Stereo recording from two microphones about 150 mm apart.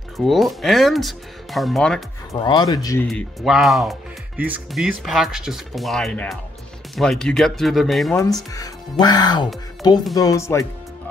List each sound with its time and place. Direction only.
0.2 s speech: centre (ahead or behind)
2.3 s speech: 30° left (ahead or behind)
3.1 s speech: centre (ahead or behind)
8.1 s speech: 20° left (ahead or behind)